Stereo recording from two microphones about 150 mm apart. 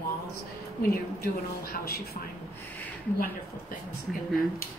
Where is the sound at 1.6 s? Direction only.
90° left.